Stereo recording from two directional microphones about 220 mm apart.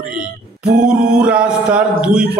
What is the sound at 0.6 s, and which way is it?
Music, 40° right (ahead or behind).